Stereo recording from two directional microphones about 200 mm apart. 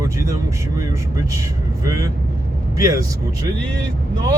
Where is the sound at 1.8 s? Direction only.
15° right (ahead or behind).